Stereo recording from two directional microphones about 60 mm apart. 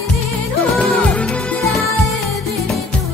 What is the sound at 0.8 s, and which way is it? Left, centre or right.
Music, centre.